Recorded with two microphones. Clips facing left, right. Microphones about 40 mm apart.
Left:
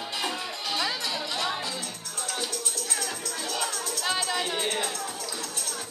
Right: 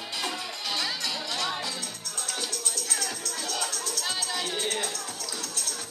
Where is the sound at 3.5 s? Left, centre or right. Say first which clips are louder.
Left 2 dB; centre.